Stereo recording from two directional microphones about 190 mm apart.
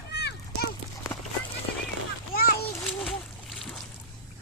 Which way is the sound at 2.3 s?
55° left (ahead or behind).